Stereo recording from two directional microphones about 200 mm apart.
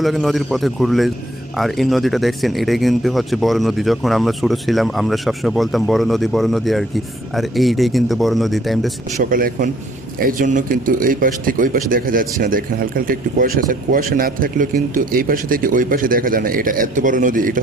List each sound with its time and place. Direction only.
0.0 s speech: centre (ahead or behind)
9.1 s a man's voice: 45° right (ahead or behind)